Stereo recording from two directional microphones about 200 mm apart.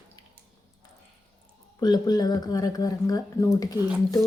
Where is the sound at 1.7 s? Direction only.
20° left (ahead or behind).